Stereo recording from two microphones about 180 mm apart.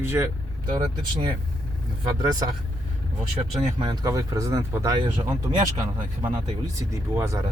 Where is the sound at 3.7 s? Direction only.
25° right (ahead or behind).